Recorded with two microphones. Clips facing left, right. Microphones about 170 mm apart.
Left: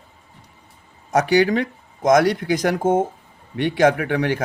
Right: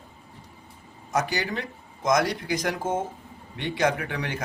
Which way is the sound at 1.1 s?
70° left (ahead or behind).